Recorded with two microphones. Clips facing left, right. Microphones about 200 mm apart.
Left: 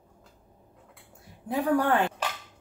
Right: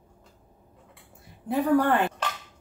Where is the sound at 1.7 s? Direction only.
5° left (ahead or behind).